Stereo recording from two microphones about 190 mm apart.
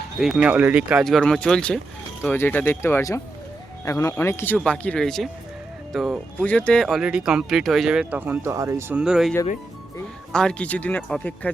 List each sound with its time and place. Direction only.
0.2 s speech: 5° right (ahead or behind)
9.0 s speech: 5° right (ahead or behind)
10.3 s speech: 5° left (ahead or behind)